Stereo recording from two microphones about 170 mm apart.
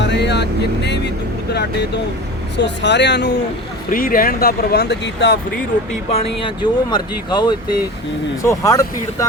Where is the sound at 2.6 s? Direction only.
90° left.